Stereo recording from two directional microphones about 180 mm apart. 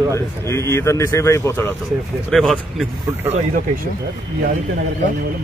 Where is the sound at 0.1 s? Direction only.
15° left (ahead or behind).